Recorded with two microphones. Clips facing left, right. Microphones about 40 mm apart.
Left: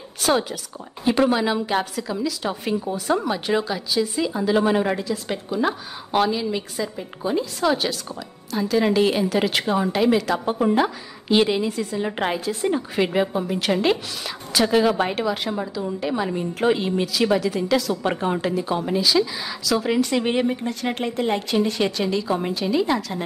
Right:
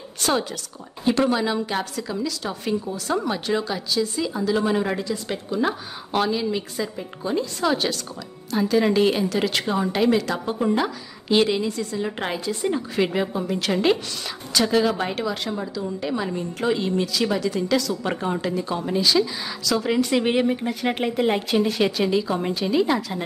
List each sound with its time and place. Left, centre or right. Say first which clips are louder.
0.2 s a woman's voice: left 2 dB; centre
4.8 s a woman's voice: left 2 dB; centre
10.4 s a woman's voice: left 3 dB; centre